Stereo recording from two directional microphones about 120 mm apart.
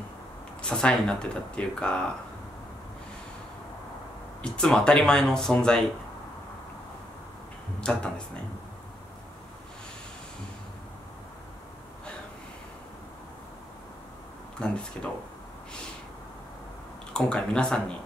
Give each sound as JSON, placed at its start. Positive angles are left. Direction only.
{"t": 0.6, "sound": "speech", "side_deg": 5}
{"t": 4.4, "sound": "speech", "side_deg": 5}
{"t": 14.6, "sound": "speech", "side_deg": 10}
{"t": 17.1, "sound": "speech", "side_deg": 5}